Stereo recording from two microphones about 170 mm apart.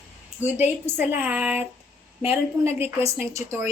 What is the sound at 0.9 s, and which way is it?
A woman's voice, 10° right (ahead or behind).